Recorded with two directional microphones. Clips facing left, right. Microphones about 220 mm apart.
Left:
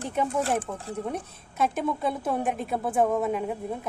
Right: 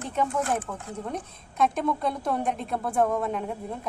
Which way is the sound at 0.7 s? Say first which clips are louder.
Left 1 dB; 20° left (ahead or behind).